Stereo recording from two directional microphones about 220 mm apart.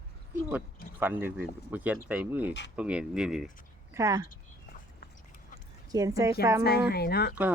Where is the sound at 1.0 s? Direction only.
10° right (ahead or behind).